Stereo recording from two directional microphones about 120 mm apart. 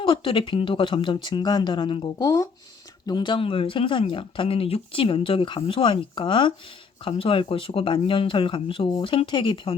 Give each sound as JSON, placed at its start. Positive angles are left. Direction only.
{"t": 0.0, "sound": "speech", "side_deg": 45}
{"t": 2.1, "sound": "speech", "side_deg": 30}
{"t": 3.1, "sound": "speech", "side_deg": 40}